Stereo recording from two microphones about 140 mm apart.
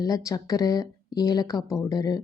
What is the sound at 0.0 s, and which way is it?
Speech, 25° left (ahead or behind).